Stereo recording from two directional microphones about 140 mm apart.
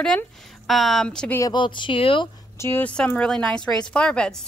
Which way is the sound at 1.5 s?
35° left (ahead or behind).